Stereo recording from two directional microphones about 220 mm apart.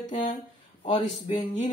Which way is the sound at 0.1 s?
35° left (ahead or behind).